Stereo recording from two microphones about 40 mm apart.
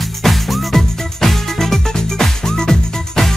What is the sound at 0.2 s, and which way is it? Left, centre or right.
Music, centre.